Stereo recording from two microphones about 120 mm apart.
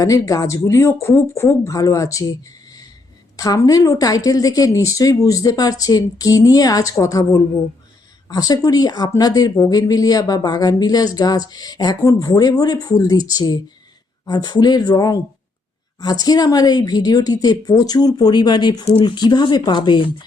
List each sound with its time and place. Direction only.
0.0 s a woman's voice: 30° left (ahead or behind)